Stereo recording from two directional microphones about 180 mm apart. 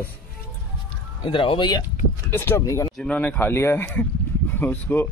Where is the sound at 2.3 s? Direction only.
15° left (ahead or behind).